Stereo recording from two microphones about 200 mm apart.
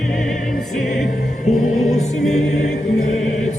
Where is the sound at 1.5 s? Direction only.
40° left (ahead or behind).